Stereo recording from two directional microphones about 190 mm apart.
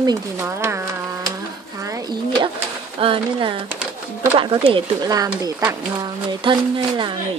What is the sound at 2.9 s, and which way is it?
Speech, 30° right (ahead or behind).